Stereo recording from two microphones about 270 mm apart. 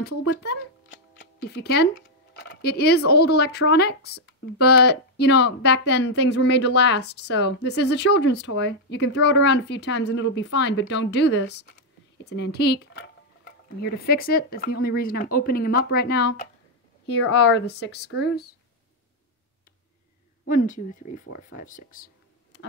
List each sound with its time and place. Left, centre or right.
0.4 s a sound: left
2.3 s tick: left
3.1 s speech: left
20.4 s speech: left